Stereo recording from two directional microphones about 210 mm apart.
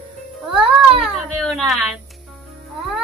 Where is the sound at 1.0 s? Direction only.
Centre (ahead or behind).